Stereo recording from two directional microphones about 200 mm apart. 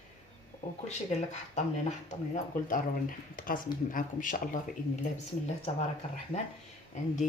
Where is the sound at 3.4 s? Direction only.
45° left (ahead or behind).